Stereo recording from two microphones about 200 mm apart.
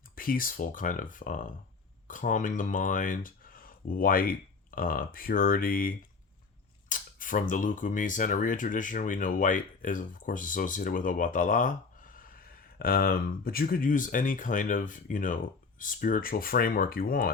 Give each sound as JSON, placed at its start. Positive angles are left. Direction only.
{"t": 0.2, "sound": "speech", "side_deg": 45}